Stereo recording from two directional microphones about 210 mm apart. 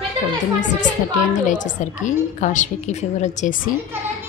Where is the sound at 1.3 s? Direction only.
35° left (ahead or behind).